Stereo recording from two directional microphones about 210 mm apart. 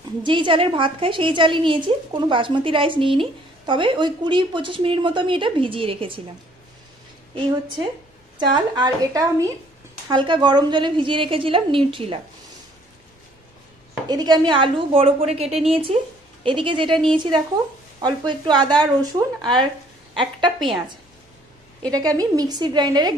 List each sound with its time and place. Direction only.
0.2 s a woman's voice: 25° right (ahead or behind)
8.4 s a woman's voice: 20° right (ahead or behind)
14.0 s a woman's voice: 20° right (ahead or behind)
21.9 s a woman's voice: 15° right (ahead or behind)